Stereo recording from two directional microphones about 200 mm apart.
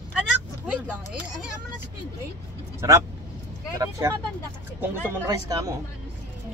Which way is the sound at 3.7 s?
15° right (ahead or behind).